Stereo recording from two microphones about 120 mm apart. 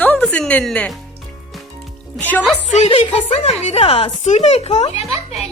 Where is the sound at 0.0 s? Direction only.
10° left (ahead or behind).